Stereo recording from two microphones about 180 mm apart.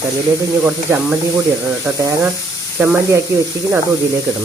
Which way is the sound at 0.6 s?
10° right (ahead or behind).